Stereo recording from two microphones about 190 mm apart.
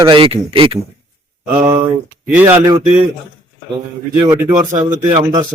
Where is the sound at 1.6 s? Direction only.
10° right (ahead or behind).